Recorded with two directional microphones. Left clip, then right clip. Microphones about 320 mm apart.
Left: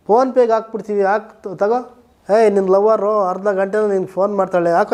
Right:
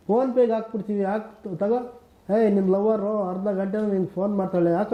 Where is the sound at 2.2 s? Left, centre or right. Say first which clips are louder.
Left 8 dB; centre.